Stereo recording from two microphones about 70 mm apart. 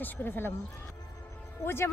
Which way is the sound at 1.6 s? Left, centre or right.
Left.